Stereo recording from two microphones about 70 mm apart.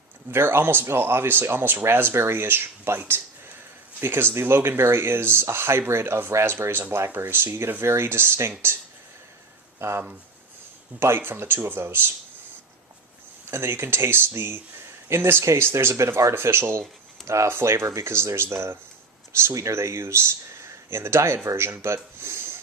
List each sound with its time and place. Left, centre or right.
0.3 s speech: right
4.0 s speech: right
9.7 s speech: right
11.0 s speech: right
13.5 s speech: right